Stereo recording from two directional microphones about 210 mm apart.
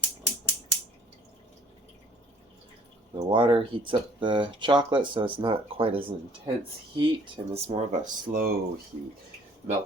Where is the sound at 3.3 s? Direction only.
25° right (ahead or behind).